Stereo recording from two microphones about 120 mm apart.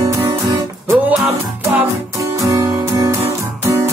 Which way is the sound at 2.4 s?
25° right (ahead or behind).